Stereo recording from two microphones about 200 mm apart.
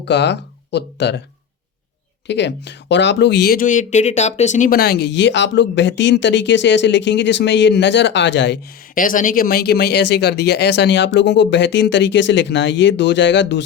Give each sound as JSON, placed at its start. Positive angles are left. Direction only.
{"t": 0.0, "sound": "speech", "side_deg": 60}
{"t": 2.2, "sound": "speech", "side_deg": 60}
{"t": 9.0, "sound": "speech", "side_deg": 40}